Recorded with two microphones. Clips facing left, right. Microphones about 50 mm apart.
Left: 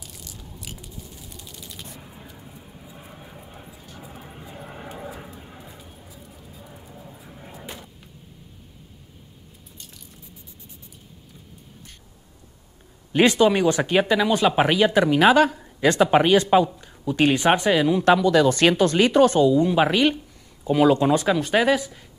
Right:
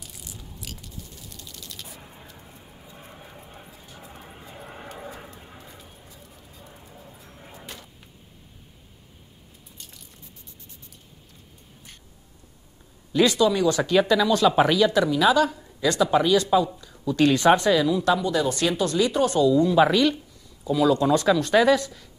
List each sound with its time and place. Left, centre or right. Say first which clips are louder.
0.7 s a sound: left 2 dB; centre
1.9 s a sound: left 2 dB; centre
13.1 s speech: left 3 dB; left
15.0 s speech: left 4 dB; left
16.8 s speech: even; left
17.8 s speech: left 4 dB; left
18.1 s speech: left 6 dB; left
18.5 s speech: left 5 dB; left
19.3 s a woman's voice: left 1 dB; left
20.6 s speech: left 3 dB; left
21.1 s speech: right 1 dB; centre